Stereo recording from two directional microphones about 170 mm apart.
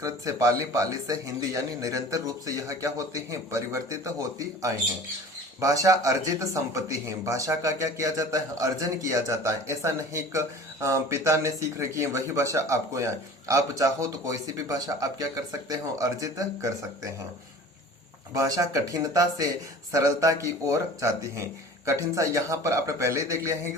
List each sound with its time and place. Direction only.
0.0 s speech: 20° right (ahead or behind)
18.3 s a man's voice: 20° right (ahead or behind)